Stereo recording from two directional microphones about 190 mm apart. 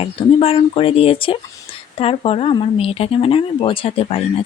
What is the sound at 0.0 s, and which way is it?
Speech, 30° left (ahead or behind).